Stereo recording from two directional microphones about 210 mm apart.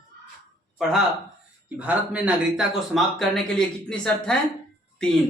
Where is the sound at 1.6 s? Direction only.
5° right (ahead or behind).